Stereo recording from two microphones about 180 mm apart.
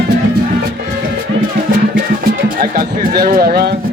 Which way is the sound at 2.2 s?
50° right (ahead or behind).